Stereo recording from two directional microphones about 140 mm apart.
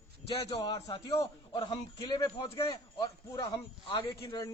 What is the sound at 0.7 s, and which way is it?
A man's voice, 25° left (ahead or behind).